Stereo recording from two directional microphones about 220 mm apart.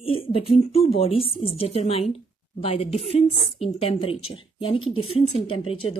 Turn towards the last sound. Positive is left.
turn(degrees=25)  # may be behind; listen again after turning